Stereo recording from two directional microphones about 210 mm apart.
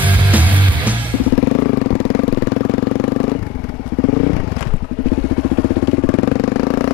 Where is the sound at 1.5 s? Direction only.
20° left (ahead or behind).